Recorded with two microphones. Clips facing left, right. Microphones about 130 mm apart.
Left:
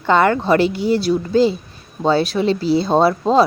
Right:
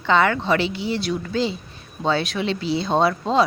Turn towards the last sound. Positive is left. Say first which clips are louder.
# left 5 dB
turn(degrees=40)  # may be behind; listen again after turning